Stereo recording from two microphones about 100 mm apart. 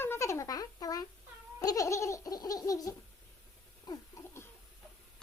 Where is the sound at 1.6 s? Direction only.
35° left (ahead or behind).